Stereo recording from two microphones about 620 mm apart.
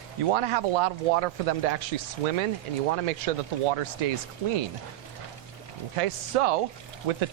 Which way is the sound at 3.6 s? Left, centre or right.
Right.